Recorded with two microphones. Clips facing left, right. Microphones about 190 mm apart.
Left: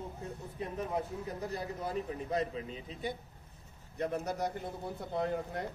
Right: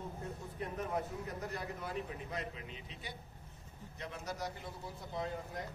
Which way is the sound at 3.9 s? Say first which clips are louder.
Left 9 dB; 55° left (ahead or behind).